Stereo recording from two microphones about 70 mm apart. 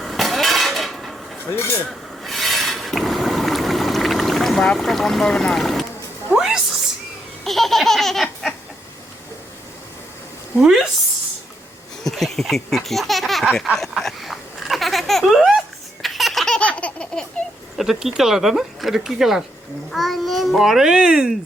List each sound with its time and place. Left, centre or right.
0.0 s a sound: centre
1.5 s speech: left
1.9 s rub: centre
6.3 s a sound: centre
7.4 s laughter: centre
10.6 s speech: centre
12.0 s speech: centre
13.9 s a sound: centre
16.6 s laughter: centre
17.7 s a child's voice: centre